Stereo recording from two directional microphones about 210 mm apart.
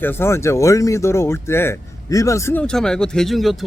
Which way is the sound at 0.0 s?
10° left (ahead or behind).